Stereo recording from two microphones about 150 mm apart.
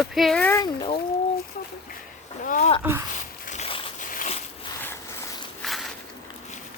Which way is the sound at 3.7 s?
35° left (ahead or behind).